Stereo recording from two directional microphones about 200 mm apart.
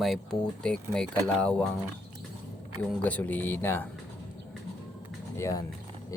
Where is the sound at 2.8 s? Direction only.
5° left (ahead or behind).